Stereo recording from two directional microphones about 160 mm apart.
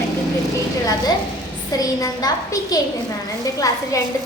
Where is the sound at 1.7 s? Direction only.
25° left (ahead or behind).